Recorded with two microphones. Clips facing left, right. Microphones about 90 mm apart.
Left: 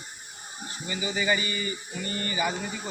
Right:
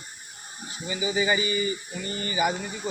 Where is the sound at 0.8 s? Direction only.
15° right (ahead or behind).